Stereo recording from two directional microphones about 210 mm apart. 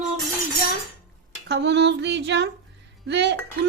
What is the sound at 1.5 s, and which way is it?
Speech, 55° right (ahead or behind).